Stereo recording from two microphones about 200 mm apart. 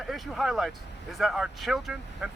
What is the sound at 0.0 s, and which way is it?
Speech, centre (ahead or behind).